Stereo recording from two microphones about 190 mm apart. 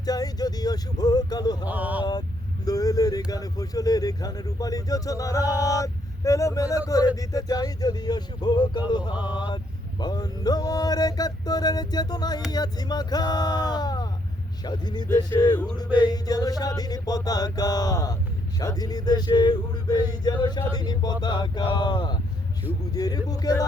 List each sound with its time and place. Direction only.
0.0 s speech: 20° left (ahead or behind)
1.6 s speech: 10° right (ahead or behind)
2.6 s speech: 20° left (ahead or behind)